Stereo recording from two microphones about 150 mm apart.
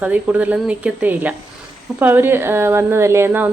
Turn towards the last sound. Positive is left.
turn(degrees=-15)  # may be behind; listen again after turning